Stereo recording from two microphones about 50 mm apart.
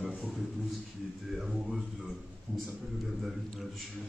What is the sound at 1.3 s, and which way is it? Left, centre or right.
Speech, centre.